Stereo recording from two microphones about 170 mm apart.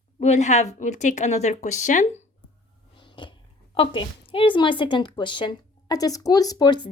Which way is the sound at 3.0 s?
30° left (ahead or behind).